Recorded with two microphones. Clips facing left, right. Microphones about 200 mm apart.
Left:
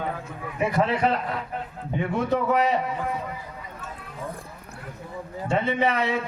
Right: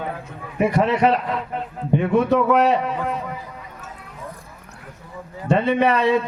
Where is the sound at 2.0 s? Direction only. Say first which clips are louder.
Right 6 dB; 70° right (ahead or behind).